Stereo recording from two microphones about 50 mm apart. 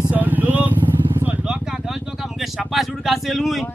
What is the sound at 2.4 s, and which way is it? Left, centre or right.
Speech, centre.